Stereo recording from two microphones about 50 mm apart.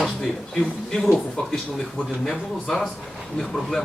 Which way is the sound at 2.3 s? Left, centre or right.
Centre.